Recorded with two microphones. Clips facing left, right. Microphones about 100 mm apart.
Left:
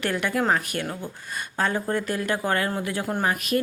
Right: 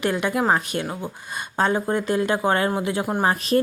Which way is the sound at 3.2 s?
30° right (ahead or behind).